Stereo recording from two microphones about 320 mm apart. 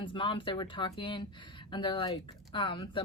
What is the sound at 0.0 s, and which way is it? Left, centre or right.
Speech, centre.